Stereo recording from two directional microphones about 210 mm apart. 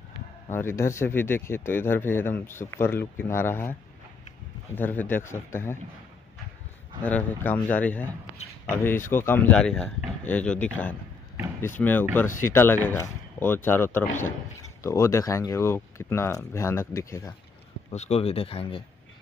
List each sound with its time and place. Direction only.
0.5 s speech: 10° left (ahead or behind)
4.7 s speech: 10° left (ahead or behind)
7.0 s speech: 5° left (ahead or behind)
17.9 s speech: 30° left (ahead or behind)